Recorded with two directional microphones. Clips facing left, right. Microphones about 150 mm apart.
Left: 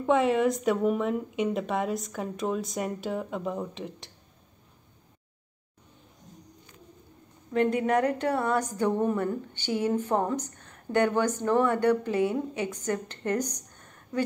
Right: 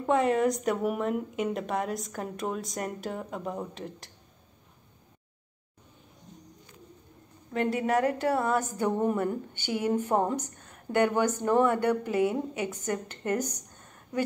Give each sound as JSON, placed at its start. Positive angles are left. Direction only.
{"t": 0.0, "sound": "speech", "side_deg": 0}
{"t": 7.8, "sound": "speech", "side_deg": -5}